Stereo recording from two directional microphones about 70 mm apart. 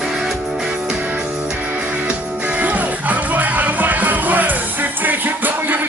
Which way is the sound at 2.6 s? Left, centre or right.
Right.